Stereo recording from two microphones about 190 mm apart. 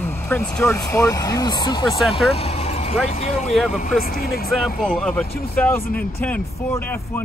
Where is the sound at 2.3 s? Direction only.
30° left (ahead or behind).